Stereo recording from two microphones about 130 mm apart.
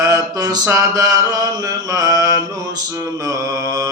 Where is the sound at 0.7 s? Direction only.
25° right (ahead or behind).